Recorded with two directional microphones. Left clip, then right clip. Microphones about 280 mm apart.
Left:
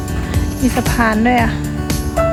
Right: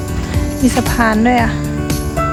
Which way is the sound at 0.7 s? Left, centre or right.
Centre.